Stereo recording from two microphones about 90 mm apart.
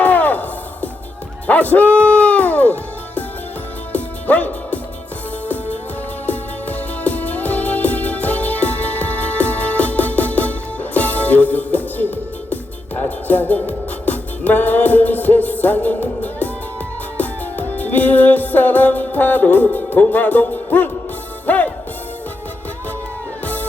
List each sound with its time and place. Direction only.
0.0 s music: 20° left (ahead or behind)
3.9 s music: 20° left (ahead or behind)
6.2 s music: 20° left (ahead or behind)